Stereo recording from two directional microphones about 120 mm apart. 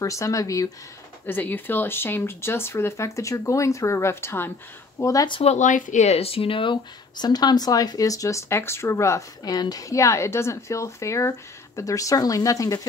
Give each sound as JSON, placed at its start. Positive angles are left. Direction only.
{"t": 0.0, "sound": "speech", "side_deg": 25}
{"t": 1.2, "sound": "speech", "side_deg": 15}
{"t": 5.4, "sound": "speech", "side_deg": 75}